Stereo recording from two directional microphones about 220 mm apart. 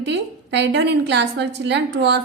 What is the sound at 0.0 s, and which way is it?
A woman's voice, 50° right (ahead or behind).